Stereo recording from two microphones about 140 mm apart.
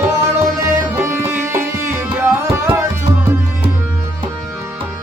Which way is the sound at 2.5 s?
20° right (ahead or behind).